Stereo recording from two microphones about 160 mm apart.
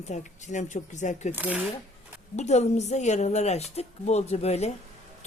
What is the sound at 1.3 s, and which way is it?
Speech, 10° right (ahead or behind).